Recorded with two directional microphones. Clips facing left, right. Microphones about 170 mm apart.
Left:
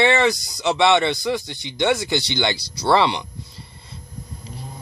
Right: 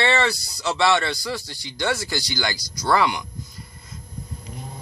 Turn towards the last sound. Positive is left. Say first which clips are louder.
# even
turn(degrees=30)  # may be behind; listen again after turning